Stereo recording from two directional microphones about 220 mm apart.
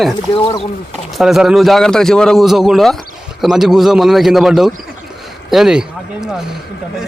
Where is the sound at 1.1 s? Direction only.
Centre (ahead or behind).